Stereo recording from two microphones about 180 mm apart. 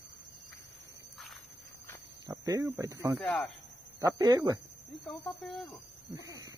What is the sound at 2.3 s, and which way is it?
Speech, 20° right (ahead or behind).